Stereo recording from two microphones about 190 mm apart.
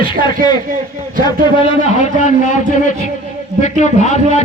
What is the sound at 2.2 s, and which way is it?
A man's voice, 40° left (ahead or behind).